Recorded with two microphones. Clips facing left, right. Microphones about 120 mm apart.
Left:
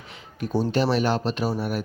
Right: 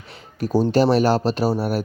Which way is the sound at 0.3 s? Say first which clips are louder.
Right 6 dB; 40° right (ahead or behind).